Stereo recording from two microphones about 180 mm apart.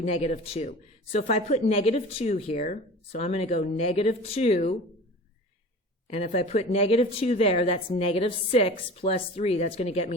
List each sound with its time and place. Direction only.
0.1 s speech: 35° left (ahead or behind)
6.1 s speech: 35° left (ahead or behind)